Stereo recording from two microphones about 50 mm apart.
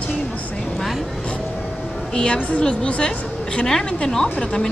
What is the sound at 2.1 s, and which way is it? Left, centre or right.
A woman's voice, centre.